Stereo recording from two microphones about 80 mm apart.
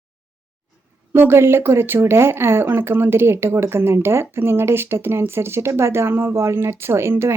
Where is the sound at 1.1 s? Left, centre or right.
Right.